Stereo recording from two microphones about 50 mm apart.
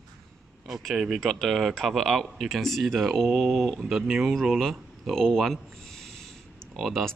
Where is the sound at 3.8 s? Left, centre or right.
Centre.